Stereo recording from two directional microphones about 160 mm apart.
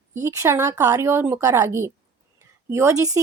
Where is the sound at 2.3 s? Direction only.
15° right (ahead or behind).